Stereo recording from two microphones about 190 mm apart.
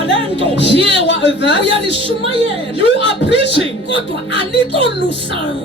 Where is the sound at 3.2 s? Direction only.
65° left (ahead or behind).